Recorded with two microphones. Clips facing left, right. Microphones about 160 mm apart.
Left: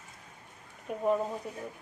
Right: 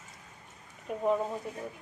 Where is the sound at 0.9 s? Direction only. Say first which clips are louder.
Even; centre (ahead or behind).